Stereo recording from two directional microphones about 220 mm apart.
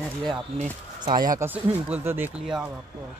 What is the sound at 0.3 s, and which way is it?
Speech, 20° right (ahead or behind).